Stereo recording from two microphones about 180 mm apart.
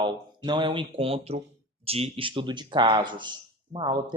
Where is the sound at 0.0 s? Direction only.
25° right (ahead or behind).